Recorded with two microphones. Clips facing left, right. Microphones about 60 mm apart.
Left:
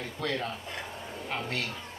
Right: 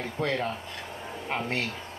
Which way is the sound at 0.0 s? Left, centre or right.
Right.